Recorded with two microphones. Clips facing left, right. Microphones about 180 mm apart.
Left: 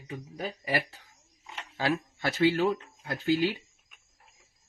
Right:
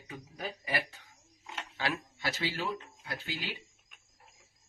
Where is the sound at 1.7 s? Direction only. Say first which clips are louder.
Left 7 dB; 45° left (ahead or behind).